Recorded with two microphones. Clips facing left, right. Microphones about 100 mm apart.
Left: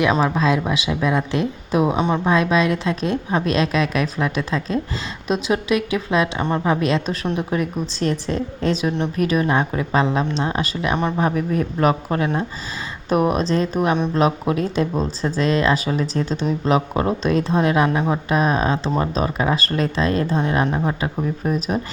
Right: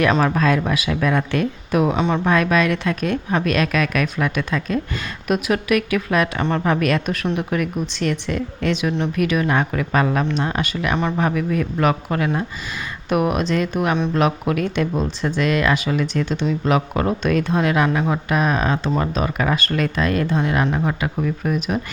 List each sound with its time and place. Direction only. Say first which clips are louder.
0.0 s speech: right 1 dB; 15° left (ahead or behind); by 20.7 s 30° left (ahead or behind)
20.7 s speech: even; 20° left (ahead or behind)
21.0 s speech: even; 30° left (ahead or behind)